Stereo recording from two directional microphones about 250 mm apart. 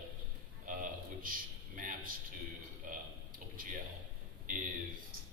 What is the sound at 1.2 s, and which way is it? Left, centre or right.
Speech, right.